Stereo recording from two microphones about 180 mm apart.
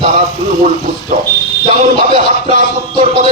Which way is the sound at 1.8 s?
50° right (ahead or behind).